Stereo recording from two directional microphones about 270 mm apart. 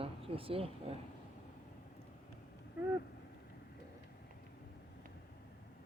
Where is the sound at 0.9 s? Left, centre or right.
Right.